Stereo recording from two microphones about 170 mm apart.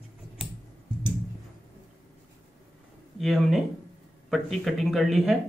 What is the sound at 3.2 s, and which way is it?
Speech, centre (ahead or behind).